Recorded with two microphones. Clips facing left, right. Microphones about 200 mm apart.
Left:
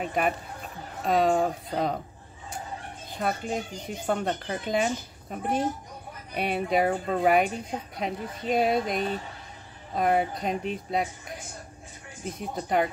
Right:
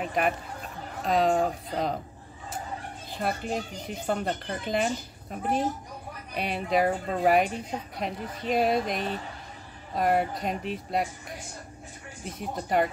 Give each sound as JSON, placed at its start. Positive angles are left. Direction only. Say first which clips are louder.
{"t": 0.0, "sound": "speech", "louder": "even", "side_deg": 0}
{"t": 3.2, "sound": "speech", "louder": "left 1 dB", "side_deg": 0}
{"t": 12.4, "sound": "speech", "louder": "even", "side_deg": 0}